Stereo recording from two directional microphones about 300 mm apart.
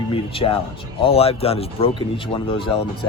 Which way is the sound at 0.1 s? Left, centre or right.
Centre.